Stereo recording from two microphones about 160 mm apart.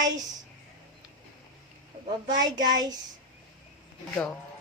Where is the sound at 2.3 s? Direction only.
25° right (ahead or behind).